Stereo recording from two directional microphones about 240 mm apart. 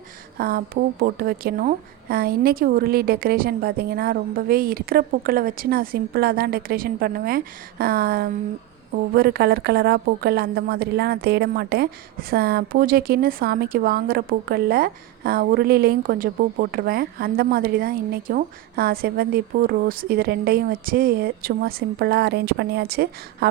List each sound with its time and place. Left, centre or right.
0.3 s a woman's voice: right